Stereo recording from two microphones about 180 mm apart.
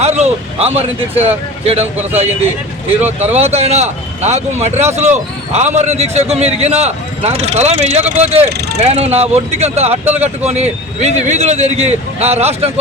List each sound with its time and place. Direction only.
0.0 s a man's voice: 40° right (ahead or behind)
3.3 s a man's voice: 35° right (ahead or behind)
10.0 s speech: 10° right (ahead or behind)
10.4 s a man's voice: 40° right (ahead or behind)